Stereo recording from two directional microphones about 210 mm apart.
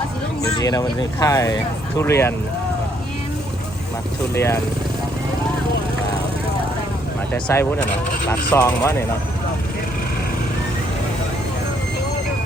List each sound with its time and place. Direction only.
0.4 s speech: 15° left (ahead or behind)
4.4 s speech: 10° left (ahead or behind)
7.3 s speech: 10° left (ahead or behind)